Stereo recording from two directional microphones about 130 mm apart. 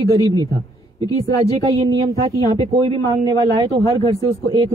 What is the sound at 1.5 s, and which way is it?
Speech, 40° right (ahead or behind).